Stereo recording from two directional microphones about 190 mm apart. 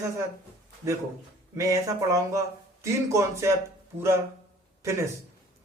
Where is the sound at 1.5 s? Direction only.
15° right (ahead or behind).